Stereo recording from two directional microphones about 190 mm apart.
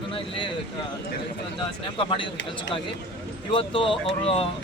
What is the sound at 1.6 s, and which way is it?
Speech, 25° left (ahead or behind).